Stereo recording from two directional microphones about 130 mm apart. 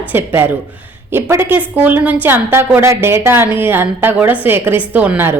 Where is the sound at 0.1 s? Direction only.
15° right (ahead or behind).